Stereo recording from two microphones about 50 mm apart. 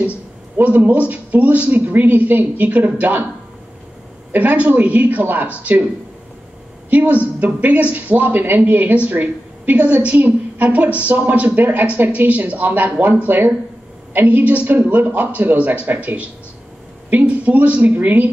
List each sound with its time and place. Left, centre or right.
0.7 s a woman's voice: right
4.3 s a woman's voice: right
6.9 s a woman's voice: right
17.3 s a woman's voice: right